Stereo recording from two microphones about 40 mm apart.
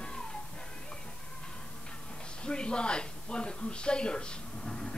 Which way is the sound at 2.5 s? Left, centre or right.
Left.